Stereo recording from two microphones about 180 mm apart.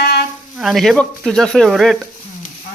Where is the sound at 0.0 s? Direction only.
60° left (ahead or behind).